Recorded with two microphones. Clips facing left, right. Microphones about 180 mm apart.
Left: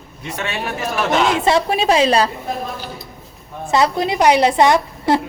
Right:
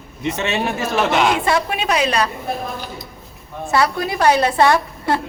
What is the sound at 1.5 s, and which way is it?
Speech, 30° left (ahead or behind).